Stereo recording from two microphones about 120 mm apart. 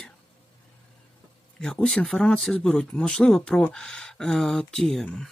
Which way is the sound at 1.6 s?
5° left (ahead or behind).